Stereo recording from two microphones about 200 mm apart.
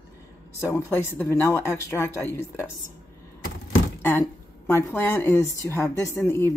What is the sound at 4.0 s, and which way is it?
A woman's voice, 10° left (ahead or behind).